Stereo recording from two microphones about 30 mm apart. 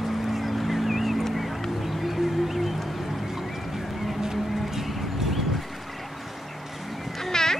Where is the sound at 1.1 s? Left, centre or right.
Centre.